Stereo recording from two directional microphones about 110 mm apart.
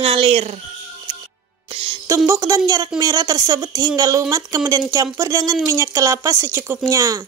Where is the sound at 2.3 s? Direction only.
30° right (ahead or behind).